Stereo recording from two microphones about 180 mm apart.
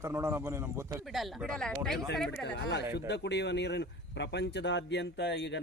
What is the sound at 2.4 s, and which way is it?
Speech, 70° left (ahead or behind).